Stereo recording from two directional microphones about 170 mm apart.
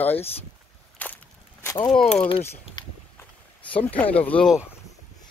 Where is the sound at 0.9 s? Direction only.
10° left (ahead or behind).